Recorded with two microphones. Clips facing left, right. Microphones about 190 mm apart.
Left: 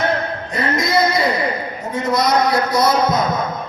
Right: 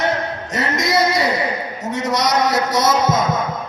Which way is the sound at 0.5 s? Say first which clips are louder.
Left 1 dB; 85° right.